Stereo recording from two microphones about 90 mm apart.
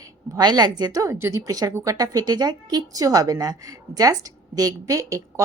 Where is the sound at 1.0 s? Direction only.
30° right (ahead or behind).